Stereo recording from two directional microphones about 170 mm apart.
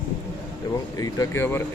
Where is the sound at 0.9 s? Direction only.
20° left (ahead or behind).